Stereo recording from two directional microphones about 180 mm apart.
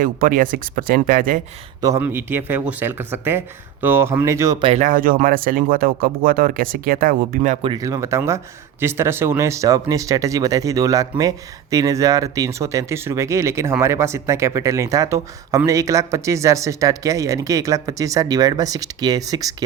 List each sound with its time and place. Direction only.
0.0 s speech: 50° right (ahead or behind)
1.8 s speech: 15° right (ahead or behind)
4.6 s speech: 40° right (ahead or behind)
7.6 s speech: 25° right (ahead or behind)